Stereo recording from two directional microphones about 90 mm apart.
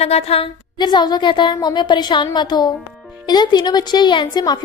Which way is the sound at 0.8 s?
55° left (ahead or behind).